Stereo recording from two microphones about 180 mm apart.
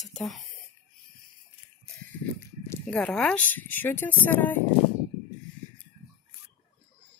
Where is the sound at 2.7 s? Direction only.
5° left (ahead or behind).